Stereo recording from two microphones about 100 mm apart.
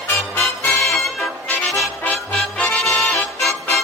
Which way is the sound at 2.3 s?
5° left (ahead or behind).